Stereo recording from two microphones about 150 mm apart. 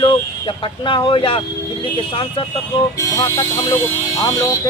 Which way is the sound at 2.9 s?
20° left (ahead or behind).